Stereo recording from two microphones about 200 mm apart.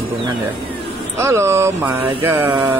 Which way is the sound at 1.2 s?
15° right (ahead or behind).